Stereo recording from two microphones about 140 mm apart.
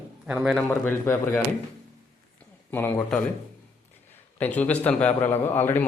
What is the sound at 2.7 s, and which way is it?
Speech, 15° left (ahead or behind).